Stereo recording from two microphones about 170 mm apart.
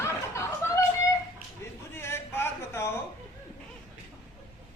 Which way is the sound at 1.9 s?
15° left (ahead or behind).